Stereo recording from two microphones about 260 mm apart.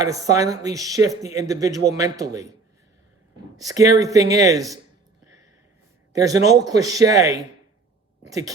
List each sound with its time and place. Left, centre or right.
0.0 s speech: centre
3.6 s speech: centre
6.1 s speech: centre